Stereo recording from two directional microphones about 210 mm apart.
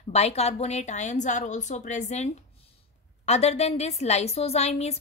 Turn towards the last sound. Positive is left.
turn(degrees=30)  # may be behind; listen again after turning